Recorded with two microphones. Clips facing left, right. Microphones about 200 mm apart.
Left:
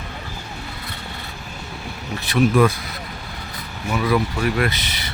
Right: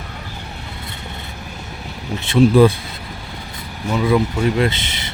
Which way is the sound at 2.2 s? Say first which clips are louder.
Right 5 dB; 30° right (ahead or behind).